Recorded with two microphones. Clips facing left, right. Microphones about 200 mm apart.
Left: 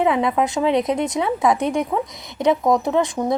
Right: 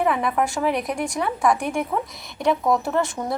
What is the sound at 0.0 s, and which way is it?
Speech, 20° left (ahead or behind).